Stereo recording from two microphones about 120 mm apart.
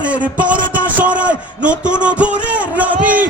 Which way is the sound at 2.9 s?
90° right.